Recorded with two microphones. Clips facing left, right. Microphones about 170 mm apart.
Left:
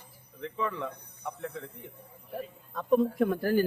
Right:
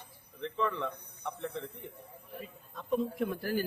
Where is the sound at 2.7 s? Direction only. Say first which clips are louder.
Left 7 dB; 55° left (ahead or behind).